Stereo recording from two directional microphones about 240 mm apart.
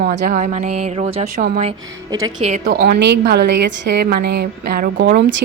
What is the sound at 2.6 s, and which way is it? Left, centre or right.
A woman's voice, right.